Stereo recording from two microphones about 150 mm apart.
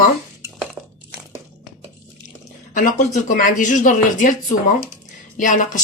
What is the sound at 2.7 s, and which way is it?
A woman's voice, 60° left (ahead or behind).